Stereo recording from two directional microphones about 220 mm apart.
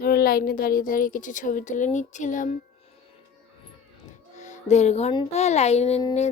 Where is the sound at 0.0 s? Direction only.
40° left (ahead or behind).